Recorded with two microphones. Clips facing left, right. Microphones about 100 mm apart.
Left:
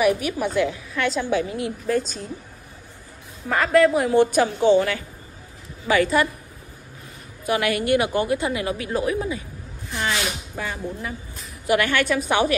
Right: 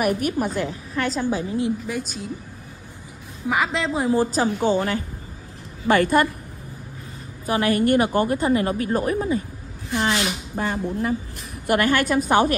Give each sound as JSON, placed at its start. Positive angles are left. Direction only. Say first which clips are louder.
{"t": 0.0, "sound": "a woman's voice", "louder": "left 1 dB", "side_deg": -45}
{"t": 1.9, "sound": "a woman's voice", "louder": "left 5 dB", "side_deg": -5}
{"t": 3.4, "sound": "a woman's voice", "louder": "left 6 dB", "side_deg": -15}
{"t": 7.4, "sound": "a woman's voice", "louder": "right 2 dB", "side_deg": -35}
{"t": 9.9, "sound": "a woman's voice", "louder": "right 3 dB", "side_deg": -30}
{"t": 11.6, "sound": "a woman's voice", "louder": "right 1 dB", "side_deg": -45}